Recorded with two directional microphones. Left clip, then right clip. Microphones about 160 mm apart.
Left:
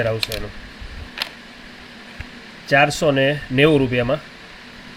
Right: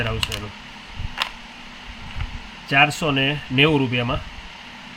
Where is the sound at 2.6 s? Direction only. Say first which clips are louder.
Left 2 dB; 30° left (ahead or behind).